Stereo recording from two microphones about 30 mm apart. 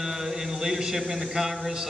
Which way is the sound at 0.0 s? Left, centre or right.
Centre.